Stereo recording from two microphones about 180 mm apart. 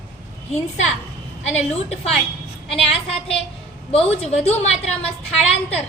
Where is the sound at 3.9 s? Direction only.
35° left (ahead or behind).